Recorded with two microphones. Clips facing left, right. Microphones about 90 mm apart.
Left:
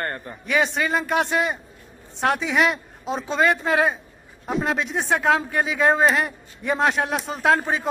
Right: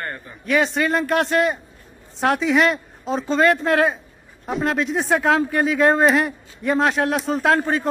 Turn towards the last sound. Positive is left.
turn(degrees=0)  # may be behind; listen again after turning